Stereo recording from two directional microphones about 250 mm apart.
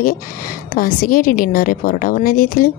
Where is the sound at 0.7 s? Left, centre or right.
Left.